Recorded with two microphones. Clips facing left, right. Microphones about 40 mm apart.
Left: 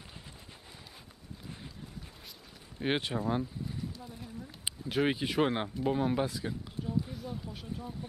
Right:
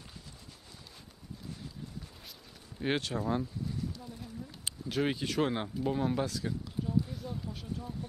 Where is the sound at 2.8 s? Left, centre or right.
Centre.